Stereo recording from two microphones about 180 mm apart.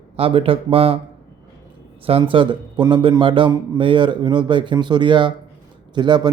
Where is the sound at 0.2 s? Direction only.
30° right (ahead or behind).